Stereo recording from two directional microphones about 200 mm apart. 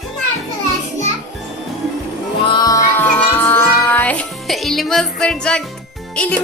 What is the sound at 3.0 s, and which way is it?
A child's voice, 10° left (ahead or behind).